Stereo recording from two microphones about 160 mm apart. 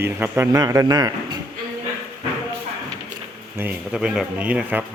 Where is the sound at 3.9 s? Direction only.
5° right (ahead or behind).